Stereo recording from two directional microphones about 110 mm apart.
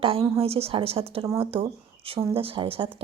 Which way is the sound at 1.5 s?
60° right (ahead or behind).